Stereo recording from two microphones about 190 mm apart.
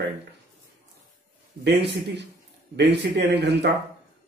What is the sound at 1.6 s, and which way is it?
A man's voice, 65° right (ahead or behind).